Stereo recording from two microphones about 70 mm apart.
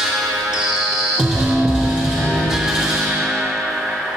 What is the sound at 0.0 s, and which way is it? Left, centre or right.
Music, centre.